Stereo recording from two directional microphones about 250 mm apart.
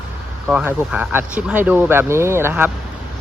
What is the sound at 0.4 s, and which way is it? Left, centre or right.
Speech, centre.